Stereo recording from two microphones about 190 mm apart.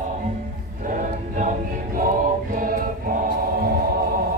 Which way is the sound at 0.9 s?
40° right (ahead or behind).